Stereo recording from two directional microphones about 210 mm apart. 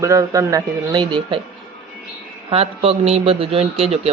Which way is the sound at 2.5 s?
30° right (ahead or behind).